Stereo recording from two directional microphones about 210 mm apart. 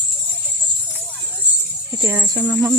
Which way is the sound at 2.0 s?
15° right (ahead or behind).